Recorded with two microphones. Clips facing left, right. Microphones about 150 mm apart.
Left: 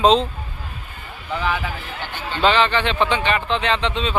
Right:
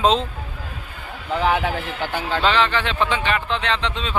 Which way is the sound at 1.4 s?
60° right (ahead or behind).